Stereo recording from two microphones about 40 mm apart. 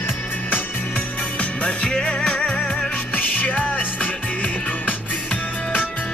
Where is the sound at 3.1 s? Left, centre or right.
Left.